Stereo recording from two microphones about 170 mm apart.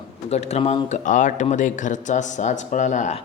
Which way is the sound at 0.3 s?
40° left (ahead or behind).